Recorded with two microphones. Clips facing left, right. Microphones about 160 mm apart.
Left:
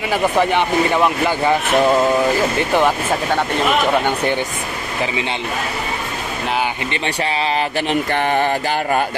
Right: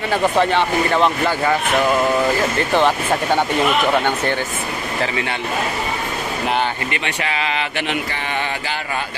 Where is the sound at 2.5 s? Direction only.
10° left (ahead or behind).